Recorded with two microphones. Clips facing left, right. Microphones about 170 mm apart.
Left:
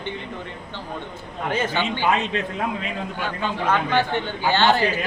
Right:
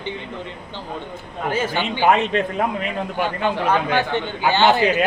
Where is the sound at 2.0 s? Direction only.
55° right (ahead or behind).